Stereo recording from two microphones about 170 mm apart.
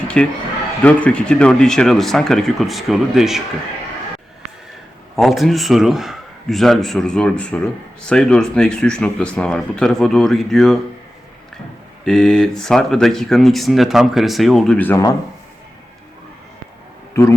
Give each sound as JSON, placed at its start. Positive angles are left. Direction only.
{"t": 0.1, "sound": "speech", "side_deg": 5}
{"t": 5.1, "sound": "speech", "side_deg": 0}
{"t": 12.0, "sound": "speech", "side_deg": 5}
{"t": 17.2, "sound": "a man's voice", "side_deg": 15}